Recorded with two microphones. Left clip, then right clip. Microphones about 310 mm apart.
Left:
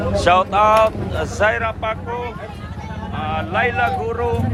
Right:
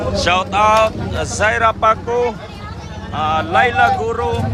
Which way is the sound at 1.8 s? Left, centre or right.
Centre.